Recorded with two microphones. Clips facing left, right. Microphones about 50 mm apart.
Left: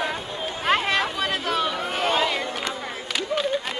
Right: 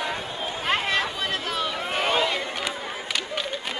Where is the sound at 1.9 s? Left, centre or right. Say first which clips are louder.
Even; centre.